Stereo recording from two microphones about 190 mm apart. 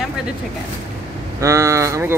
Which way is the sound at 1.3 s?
15° right (ahead or behind).